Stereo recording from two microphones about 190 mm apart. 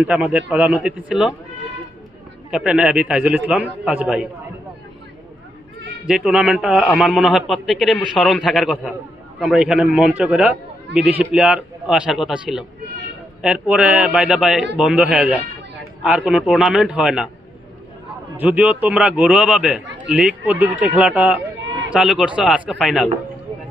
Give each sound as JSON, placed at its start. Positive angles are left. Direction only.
{"t": 0.0, "sound": "a man's voice", "side_deg": -5}
{"t": 2.5, "sound": "a man's voice", "side_deg": -5}
{"t": 6.0, "sound": "a man's voice", "side_deg": -5}
{"t": 18.4, "sound": "a man's voice", "side_deg": -5}
{"t": 21.5, "sound": "a sound", "side_deg": -75}
{"t": 21.9, "sound": "a man's voice", "side_deg": -5}